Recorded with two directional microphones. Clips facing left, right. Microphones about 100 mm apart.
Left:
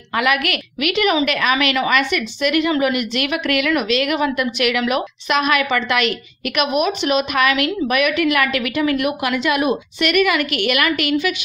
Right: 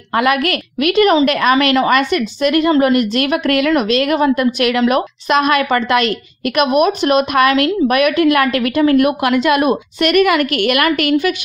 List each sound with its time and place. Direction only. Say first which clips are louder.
0.1 s a woman's voice: right 4 dB; 35° right (ahead or behind)